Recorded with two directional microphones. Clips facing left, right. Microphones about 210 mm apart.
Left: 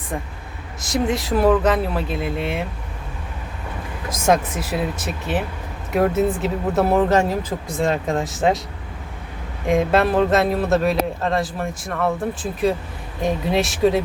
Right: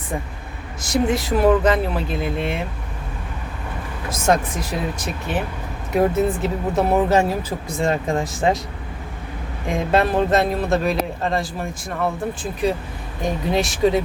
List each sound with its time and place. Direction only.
0.8 s a man's voice: centre (ahead or behind)
4.1 s a man's voice: 5° left (ahead or behind)
9.6 s a man's voice: centre (ahead or behind)